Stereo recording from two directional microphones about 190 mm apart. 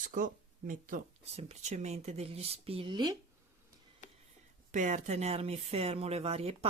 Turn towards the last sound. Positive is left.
turn(degrees=-30)  # may be behind; listen again after turning